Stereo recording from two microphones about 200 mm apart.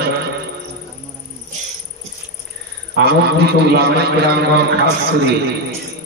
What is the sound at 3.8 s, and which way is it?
Speech, 55° right (ahead or behind).